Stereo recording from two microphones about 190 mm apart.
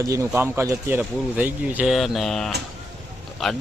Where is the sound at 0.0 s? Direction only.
15° right (ahead or behind).